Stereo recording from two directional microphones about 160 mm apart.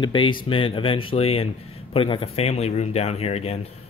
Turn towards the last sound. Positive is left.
turn(degrees=40)  # may be behind; listen again after turning